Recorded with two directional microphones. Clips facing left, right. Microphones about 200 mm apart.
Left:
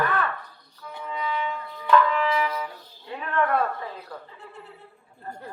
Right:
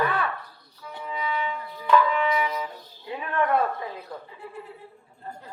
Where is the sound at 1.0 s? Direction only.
10° right (ahead or behind).